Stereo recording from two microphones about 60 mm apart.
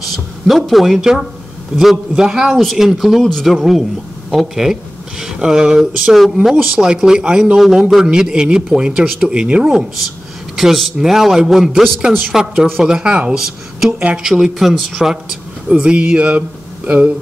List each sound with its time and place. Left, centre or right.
0.1 s a man's voice: centre
3.2 s speech: centre
3.5 s a man's voice: centre
6.4 s a man's voice: centre
10.0 s a man's voice: centre
13.9 s speech: right
14.2 s a man's voice: centre
15.8 s speech: centre